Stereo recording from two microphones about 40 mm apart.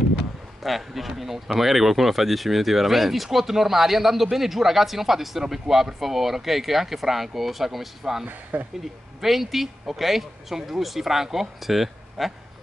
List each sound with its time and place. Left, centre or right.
0.6 s speech: centre
8.3 s speech: right
9.2 s speech: centre